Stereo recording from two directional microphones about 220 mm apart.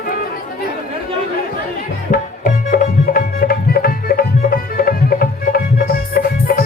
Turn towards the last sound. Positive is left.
turn(degrees=40)  # may be behind; listen again after turning